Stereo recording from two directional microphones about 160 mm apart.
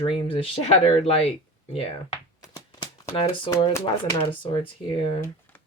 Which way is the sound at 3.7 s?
20° left (ahead or behind).